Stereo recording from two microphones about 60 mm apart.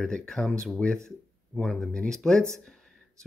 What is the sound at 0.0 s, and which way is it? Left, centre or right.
Speech, centre.